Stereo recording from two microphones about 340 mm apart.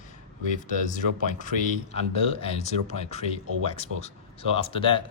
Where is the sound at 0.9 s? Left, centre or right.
Left.